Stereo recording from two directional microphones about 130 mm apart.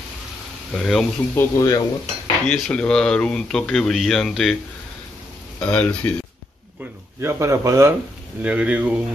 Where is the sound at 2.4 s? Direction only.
5° left (ahead or behind).